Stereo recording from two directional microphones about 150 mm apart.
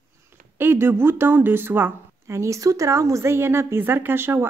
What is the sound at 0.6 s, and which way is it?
A woman's voice, 15° right (ahead or behind).